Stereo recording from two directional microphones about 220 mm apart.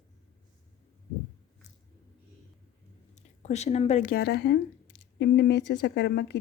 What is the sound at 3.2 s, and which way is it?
Speech, 30° left (ahead or behind).